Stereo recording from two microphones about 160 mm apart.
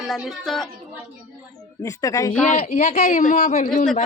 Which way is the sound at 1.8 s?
20° left (ahead or behind).